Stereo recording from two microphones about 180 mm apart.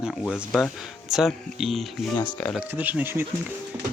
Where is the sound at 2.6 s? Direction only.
10° right (ahead or behind).